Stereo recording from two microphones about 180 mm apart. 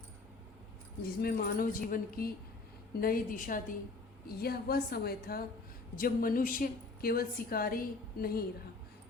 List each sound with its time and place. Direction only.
1.0 s a woman's voice: 55° left (ahead or behind)